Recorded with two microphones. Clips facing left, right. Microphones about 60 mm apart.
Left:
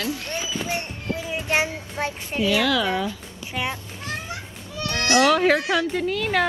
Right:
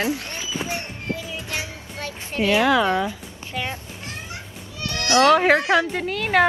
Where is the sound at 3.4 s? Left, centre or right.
Right.